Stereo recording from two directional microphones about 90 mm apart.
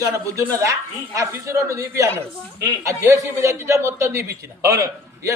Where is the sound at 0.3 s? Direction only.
35° right (ahead or behind).